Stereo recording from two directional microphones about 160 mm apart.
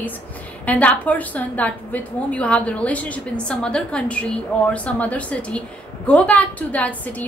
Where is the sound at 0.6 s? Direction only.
10° left (ahead or behind).